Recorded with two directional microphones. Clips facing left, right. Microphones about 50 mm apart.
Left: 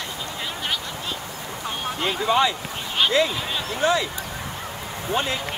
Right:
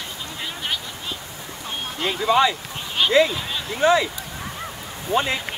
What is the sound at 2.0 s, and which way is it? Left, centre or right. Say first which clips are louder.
Speech: right 2 dB; centre.